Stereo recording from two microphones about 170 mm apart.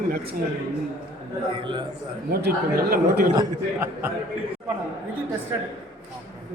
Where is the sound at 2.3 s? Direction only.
65° right (ahead or behind).